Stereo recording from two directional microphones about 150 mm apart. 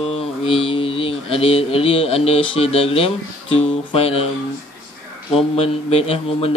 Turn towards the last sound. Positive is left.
turn(degrees=40)  # may be behind; listen again after turning